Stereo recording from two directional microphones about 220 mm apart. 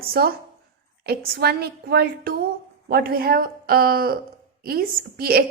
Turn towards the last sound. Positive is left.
turn(degrees=-45)  # may be behind; listen again after turning